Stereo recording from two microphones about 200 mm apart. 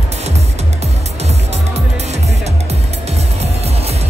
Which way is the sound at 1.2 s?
35° right (ahead or behind).